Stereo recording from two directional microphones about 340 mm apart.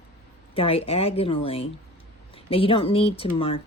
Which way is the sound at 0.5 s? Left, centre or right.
Centre.